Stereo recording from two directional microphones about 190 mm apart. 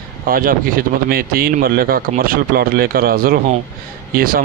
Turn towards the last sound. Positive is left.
turn(degrees=-50)  # may be behind; listen again after turning